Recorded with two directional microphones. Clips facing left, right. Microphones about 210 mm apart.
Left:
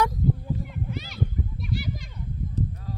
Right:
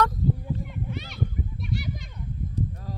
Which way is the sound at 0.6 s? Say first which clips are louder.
Left 1 dB; centre (ahead or behind).